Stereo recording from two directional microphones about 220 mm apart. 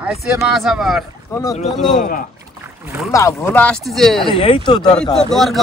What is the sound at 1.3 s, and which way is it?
Speech, 10° left (ahead or behind).